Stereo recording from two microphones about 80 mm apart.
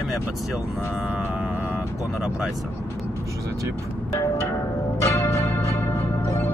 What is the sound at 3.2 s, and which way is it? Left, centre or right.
Speech, right.